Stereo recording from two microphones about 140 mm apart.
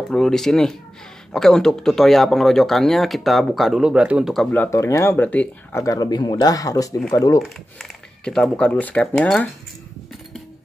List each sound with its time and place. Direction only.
0.1 s speech: 5° left (ahead or behind)
4.5 s speech: 15° left (ahead or behind)
7.4 s speech: 5° left (ahead or behind)